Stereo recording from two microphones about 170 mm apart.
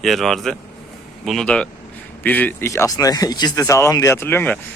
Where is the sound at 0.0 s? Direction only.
Centre (ahead or behind).